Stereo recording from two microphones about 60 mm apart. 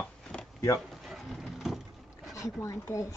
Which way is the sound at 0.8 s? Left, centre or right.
Centre.